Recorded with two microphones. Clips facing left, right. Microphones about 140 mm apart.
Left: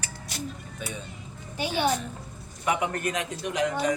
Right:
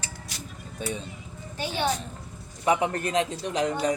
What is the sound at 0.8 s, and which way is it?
Speech, 30° right (ahead or behind).